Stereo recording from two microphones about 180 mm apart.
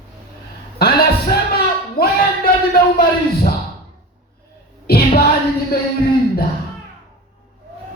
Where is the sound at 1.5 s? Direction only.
60° left (ahead or behind).